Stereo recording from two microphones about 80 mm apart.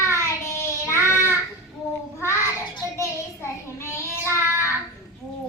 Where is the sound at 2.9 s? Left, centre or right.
Left.